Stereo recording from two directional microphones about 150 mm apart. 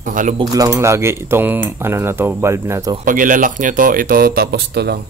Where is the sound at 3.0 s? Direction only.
60° right (ahead or behind).